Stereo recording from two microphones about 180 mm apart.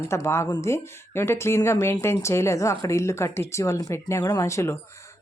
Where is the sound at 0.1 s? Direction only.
15° left (ahead or behind).